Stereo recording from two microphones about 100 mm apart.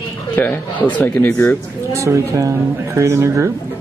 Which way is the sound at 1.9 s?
30° right (ahead or behind).